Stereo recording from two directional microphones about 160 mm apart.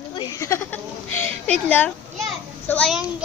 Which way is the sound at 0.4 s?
15° left (ahead or behind).